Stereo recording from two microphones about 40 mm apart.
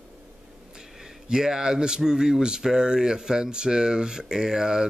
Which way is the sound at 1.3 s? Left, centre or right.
Centre.